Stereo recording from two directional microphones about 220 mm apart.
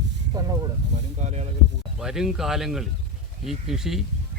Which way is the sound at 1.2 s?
30° right (ahead or behind).